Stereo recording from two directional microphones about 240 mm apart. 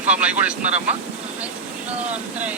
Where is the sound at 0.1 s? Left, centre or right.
Centre.